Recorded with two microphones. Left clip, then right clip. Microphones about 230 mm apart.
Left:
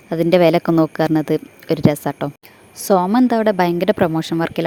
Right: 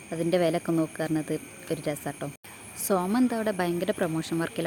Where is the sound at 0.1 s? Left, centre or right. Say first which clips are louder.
Left 12 dB; left.